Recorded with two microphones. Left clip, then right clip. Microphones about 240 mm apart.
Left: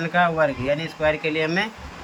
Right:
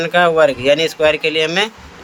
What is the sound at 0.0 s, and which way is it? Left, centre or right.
Speech, right.